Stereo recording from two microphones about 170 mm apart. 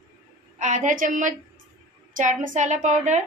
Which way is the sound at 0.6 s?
45° right (ahead or behind).